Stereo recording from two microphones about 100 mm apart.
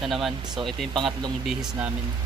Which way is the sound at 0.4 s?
45° right (ahead or behind).